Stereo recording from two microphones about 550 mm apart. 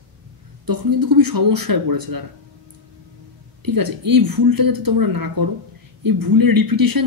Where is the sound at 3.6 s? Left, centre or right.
Right.